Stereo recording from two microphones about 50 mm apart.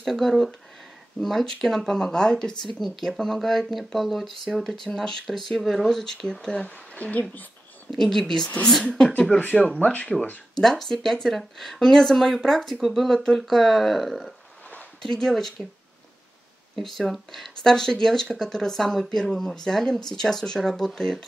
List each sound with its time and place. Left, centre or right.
0.0 s speech: centre
6.6 s a woman's voice: left
7.9 s speech: centre
9.4 s speech: left
10.6 s speech: centre
16.7 s speech: centre